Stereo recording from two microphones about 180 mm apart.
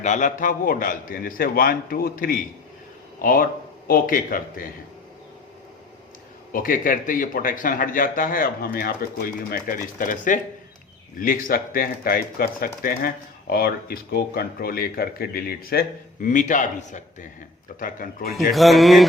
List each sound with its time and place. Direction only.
0.0 s a man's voice: 45° left (ahead or behind)
6.5 s a man's voice: 50° left (ahead or behind)
18.5 s a man's voice: centre (ahead or behind)